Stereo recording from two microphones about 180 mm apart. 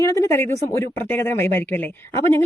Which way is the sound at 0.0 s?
15° left (ahead or behind).